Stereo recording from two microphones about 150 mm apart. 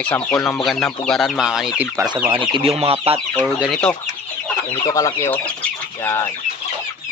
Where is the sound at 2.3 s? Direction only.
35° right (ahead or behind).